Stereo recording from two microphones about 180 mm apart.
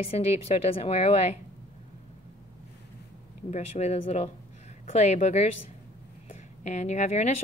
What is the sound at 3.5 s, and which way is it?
A woman's voice, 35° left (ahead or behind).